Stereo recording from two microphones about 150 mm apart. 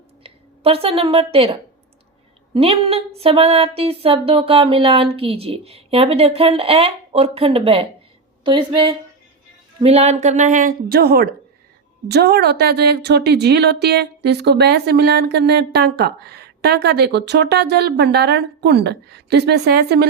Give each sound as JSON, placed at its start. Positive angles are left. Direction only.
{"t": 0.2, "sound": "a woman's voice", "side_deg": -40}
{"t": 2.6, "sound": "speech", "side_deg": -40}
{"t": 9.8, "sound": "a woman's voice", "side_deg": -45}